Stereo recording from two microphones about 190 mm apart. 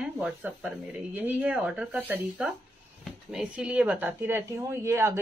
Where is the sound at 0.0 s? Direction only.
5° right (ahead or behind).